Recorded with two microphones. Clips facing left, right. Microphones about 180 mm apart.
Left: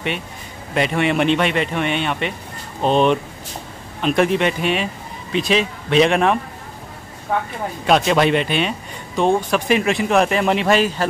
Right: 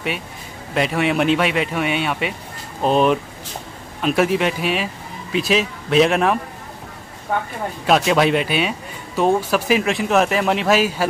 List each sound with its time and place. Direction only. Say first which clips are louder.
0.7 s speech: left 1 dB; centre (ahead or behind)
7.8 s speech: even; centre (ahead or behind)